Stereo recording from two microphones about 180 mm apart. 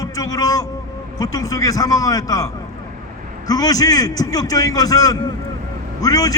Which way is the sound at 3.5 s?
20° left (ahead or behind).